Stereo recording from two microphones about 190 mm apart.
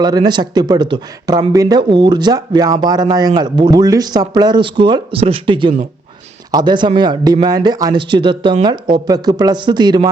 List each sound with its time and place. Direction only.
0.0 s speech: 20° right (ahead or behind)